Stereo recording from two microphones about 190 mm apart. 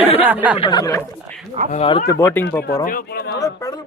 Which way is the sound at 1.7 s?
30° left (ahead or behind).